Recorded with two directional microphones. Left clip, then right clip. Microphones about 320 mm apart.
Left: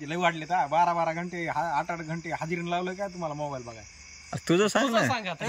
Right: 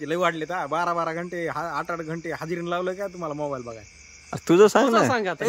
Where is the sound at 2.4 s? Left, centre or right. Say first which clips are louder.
Right 4 dB; centre.